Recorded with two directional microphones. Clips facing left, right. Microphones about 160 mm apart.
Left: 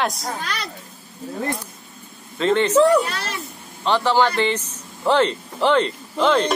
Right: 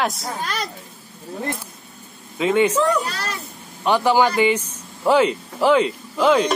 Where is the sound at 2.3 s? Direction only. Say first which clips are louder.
Right 1 dB; 10° right (ahead or behind).